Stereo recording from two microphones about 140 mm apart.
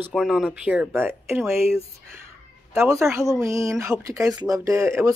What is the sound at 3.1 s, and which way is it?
Speech, 20° right (ahead or behind).